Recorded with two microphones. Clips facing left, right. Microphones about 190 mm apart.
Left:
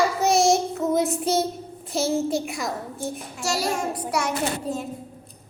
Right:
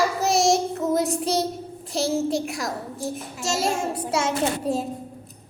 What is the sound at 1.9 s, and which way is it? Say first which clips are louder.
A child's voice: even; centre (ahead or behind).